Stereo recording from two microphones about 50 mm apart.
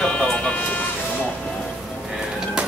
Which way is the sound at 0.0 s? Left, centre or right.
Left.